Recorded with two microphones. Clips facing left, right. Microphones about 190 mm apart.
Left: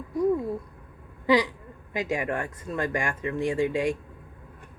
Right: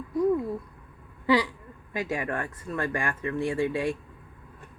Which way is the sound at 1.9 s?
15° left (ahead or behind).